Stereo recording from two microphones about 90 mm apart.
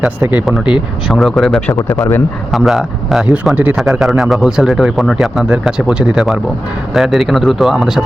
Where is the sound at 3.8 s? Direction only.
5° right (ahead or behind).